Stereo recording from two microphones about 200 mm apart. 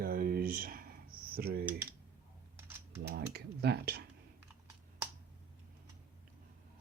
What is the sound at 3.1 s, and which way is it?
Speech, 55° right (ahead or behind).